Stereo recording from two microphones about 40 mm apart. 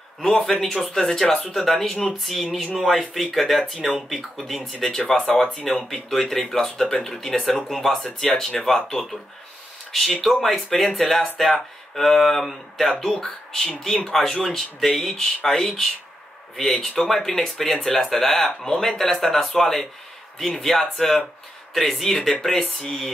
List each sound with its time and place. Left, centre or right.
0.7 s speech: left
10.2 s speech: centre